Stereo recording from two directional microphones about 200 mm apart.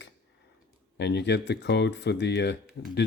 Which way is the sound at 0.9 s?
60° left (ahead or behind).